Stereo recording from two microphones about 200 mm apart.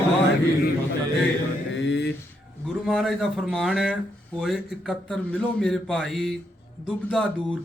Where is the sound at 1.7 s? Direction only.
65° left (ahead or behind).